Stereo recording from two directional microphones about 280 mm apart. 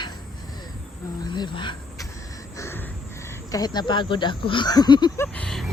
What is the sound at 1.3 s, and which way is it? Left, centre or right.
Insect, centre.